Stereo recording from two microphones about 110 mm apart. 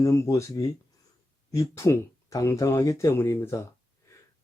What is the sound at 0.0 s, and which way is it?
Speech, 25° left (ahead or behind).